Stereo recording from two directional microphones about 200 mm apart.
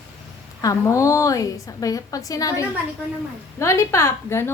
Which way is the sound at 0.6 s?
15° left (ahead or behind).